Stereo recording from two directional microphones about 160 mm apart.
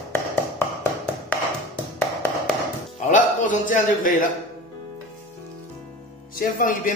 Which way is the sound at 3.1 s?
55° left (ahead or behind).